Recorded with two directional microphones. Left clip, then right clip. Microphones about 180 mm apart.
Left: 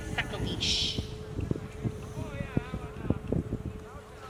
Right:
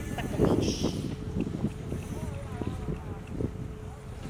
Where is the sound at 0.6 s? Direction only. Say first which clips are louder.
Left 3 dB; 60° left (ahead or behind).